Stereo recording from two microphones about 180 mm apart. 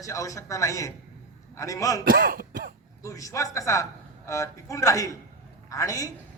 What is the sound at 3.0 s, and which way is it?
A man's voice, 20° left (ahead or behind).